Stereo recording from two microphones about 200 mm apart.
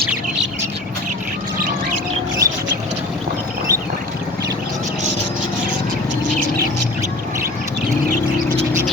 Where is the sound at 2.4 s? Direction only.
15° right (ahead or behind).